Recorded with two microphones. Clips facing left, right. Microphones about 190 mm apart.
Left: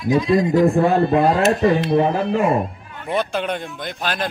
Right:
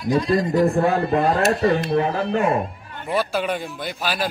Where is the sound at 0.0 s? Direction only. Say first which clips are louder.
Left 3 dB; centre (ahead or behind).